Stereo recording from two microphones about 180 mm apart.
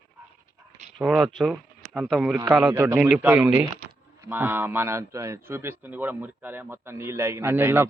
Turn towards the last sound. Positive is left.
turn(degrees=-10)  # may be behind; listen again after turning